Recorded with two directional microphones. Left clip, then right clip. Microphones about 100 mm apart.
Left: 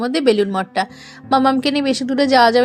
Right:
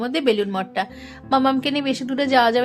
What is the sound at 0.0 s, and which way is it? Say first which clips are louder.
A woman's voice: left 4 dB; 45° left (ahead or behind).